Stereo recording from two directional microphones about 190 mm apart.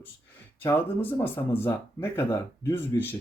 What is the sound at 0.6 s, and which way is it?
Speech, 10° left (ahead or behind).